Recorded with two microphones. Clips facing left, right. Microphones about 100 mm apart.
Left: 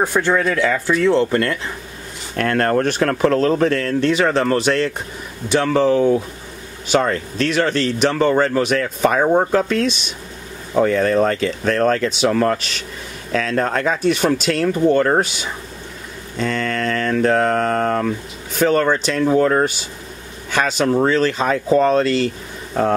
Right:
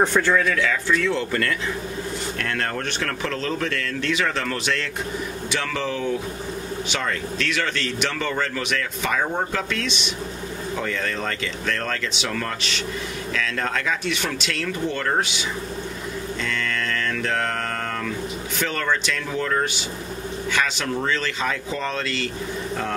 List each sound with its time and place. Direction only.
0.0 s speech: 10° left (ahead or behind)
0.5 s speech: 35° left (ahead or behind)
2.3 s speech: 45° left (ahead or behind)
16.3 s mantra: 40° left (ahead or behind)
18.6 s speech: 40° left (ahead or behind)